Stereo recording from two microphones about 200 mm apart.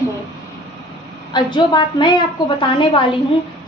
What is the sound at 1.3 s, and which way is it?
A woman's voice, 20° left (ahead or behind).